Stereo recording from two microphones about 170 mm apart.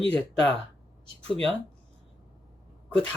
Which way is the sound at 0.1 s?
5° left (ahead or behind).